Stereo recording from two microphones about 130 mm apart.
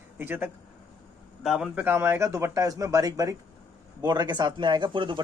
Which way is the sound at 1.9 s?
20° right (ahead or behind).